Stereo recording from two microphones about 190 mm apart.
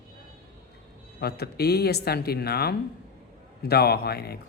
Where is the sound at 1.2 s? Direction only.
55° left (ahead or behind).